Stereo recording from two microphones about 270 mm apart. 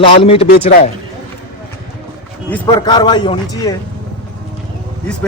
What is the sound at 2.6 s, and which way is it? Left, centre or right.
A man's voice, centre.